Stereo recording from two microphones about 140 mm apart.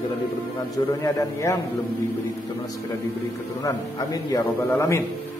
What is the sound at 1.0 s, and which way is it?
Speech, 20° left (ahead or behind).